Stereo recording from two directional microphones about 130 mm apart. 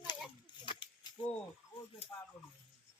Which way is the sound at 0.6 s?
40° left (ahead or behind).